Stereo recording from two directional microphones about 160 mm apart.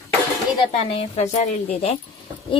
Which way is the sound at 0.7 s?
40° left (ahead or behind).